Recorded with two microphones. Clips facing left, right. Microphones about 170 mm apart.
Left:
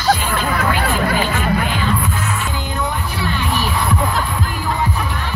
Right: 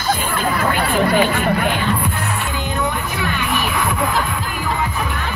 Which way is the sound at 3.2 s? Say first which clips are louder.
Left 1 dB; 35° left (ahead or behind).